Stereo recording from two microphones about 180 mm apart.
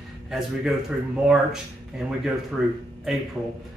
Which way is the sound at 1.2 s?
5° right (ahead or behind).